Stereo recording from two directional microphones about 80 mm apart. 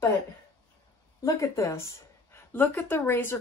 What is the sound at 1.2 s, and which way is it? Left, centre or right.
Speech, left.